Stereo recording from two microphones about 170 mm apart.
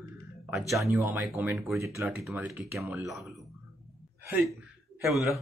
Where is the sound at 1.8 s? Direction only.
15° right (ahead or behind).